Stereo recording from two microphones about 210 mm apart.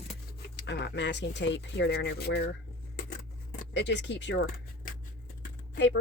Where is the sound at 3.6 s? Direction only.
55° left (ahead or behind).